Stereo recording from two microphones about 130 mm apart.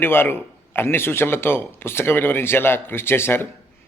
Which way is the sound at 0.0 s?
15° left (ahead or behind).